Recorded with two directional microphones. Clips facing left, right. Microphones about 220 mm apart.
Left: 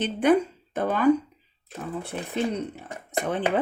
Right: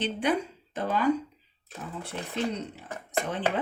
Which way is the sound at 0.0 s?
50° left (ahead or behind).